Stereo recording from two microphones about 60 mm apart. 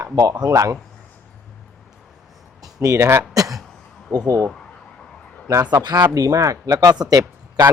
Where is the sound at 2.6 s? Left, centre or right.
Right.